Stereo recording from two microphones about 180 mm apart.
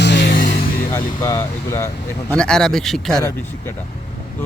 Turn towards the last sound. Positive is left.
turn(degrees=0)  # may be behind; listen again after turning